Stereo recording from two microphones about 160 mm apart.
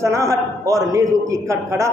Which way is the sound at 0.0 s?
20° right (ahead or behind).